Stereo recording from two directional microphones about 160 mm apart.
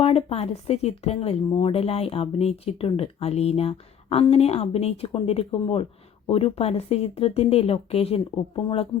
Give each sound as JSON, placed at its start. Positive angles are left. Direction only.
{"t": 0.0, "sound": "speech", "side_deg": 40}